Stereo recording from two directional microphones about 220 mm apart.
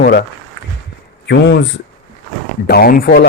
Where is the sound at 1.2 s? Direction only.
50° left (ahead or behind).